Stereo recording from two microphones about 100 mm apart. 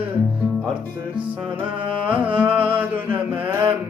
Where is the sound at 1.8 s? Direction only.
60° right (ahead or behind).